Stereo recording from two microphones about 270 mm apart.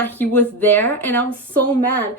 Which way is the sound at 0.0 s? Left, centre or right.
Centre.